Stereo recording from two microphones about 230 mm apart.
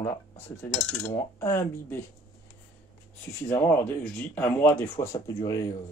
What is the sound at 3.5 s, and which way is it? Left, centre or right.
Speech, centre.